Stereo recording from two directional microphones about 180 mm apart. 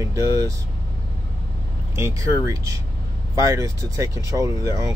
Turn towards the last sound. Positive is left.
turn(degrees=-20)  # may be behind; listen again after turning